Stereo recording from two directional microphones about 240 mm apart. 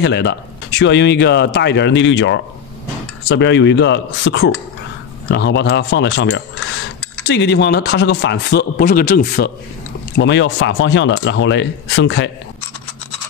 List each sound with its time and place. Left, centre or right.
0.0 s speech: left
10.1 s speech: left